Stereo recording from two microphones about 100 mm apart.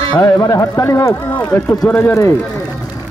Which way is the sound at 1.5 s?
10° left (ahead or behind).